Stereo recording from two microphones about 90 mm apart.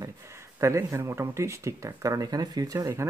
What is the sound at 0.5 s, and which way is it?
Speech, 30° right (ahead or behind).